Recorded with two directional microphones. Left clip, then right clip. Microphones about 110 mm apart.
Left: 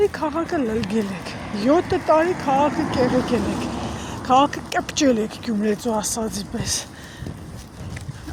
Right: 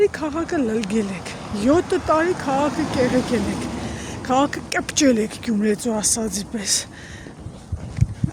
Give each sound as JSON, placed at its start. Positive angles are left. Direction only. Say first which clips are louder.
{"t": 0.0, "sound": "speech", "louder": "right 1 dB", "side_deg": -35}
{"t": 2.7, "sound": "speech", "louder": "even", "side_deg": 0}
{"t": 3.2, "sound": "speech", "louder": "left 1 dB", "side_deg": 45}
{"t": 4.3, "sound": "speech", "louder": "left 3 dB", "side_deg": -35}